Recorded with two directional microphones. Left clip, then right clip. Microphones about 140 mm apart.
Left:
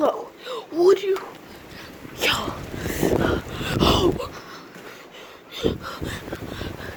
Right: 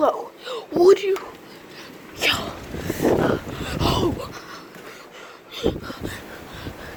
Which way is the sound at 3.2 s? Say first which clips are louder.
Right 1 dB; 20° left (ahead or behind).